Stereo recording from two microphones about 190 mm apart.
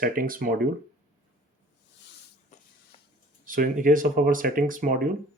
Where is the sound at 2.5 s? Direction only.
40° left (ahead or behind).